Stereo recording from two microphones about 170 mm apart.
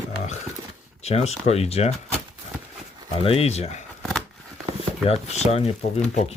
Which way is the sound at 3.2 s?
35° left (ahead or behind).